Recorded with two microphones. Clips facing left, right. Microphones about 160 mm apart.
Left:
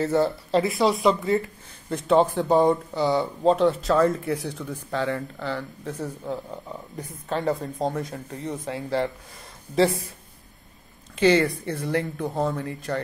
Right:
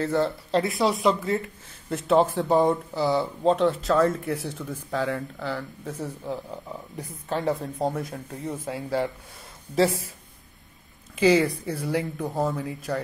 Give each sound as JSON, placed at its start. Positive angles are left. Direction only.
{"t": 0.0, "sound": "speech", "side_deg": 0}
{"t": 11.1, "sound": "speech", "side_deg": -5}